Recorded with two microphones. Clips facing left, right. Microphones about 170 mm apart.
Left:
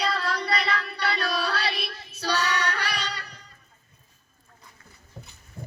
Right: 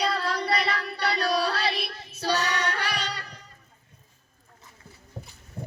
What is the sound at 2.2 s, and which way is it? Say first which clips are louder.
Child singing: even; 45° right (ahead or behind).